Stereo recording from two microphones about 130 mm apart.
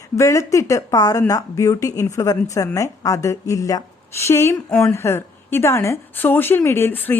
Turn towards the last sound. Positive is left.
turn(degrees=15)  # may be behind; listen again after turning